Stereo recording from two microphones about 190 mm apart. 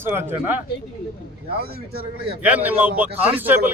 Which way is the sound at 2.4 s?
10° right (ahead or behind).